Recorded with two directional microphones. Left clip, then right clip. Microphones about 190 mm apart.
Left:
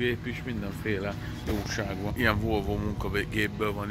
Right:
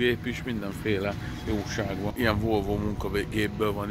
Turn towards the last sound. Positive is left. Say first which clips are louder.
# right 2 dB
turn(degrees=-15)  # may be behind; listen again after turning